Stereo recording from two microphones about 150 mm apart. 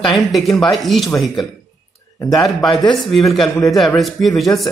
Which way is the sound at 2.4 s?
Centre (ahead or behind).